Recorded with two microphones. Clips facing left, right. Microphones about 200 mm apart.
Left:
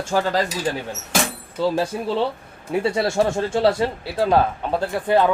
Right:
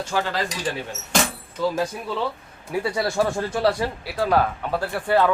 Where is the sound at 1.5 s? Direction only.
30° left (ahead or behind).